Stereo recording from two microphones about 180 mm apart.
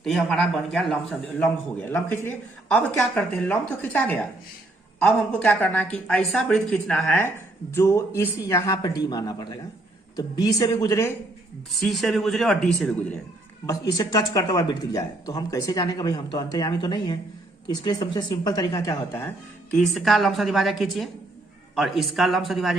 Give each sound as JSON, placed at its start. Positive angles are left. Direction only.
{"t": 0.0, "sound": "a man's voice", "side_deg": 0}
{"t": 11.7, "sound": "a man's voice", "side_deg": 0}
{"t": 13.7, "sound": "speech", "side_deg": 20}
{"t": 19.7, "sound": "a man's voice", "side_deg": 0}